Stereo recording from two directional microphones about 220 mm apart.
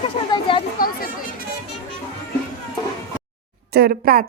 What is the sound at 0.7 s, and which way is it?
Chatter, 40° left (ahead or behind).